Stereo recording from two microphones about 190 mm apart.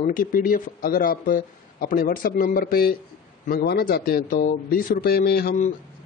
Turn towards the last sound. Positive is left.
turn(degrees=55)  # may be behind; listen again after turning